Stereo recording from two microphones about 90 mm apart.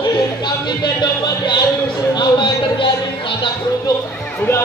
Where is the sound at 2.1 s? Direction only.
55° left (ahead or behind).